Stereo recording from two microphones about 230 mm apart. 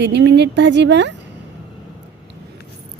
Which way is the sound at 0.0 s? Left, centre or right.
Right.